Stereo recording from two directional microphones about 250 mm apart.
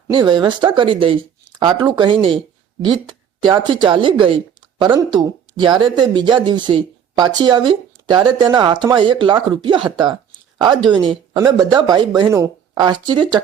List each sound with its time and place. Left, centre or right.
0.1 s a woman's voice: centre